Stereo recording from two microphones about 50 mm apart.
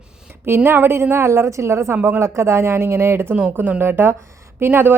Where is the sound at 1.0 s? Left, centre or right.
Right.